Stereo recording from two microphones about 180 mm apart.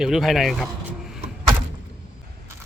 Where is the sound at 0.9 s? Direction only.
Centre (ahead or behind).